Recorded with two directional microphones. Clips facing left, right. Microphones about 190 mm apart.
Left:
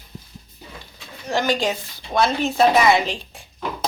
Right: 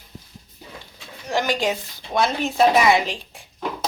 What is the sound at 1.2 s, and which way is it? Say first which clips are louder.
Speech: left 1 dB; 15° right (ahead or behind).